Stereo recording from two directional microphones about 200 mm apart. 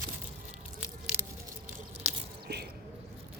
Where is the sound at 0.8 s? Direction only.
10° right (ahead or behind).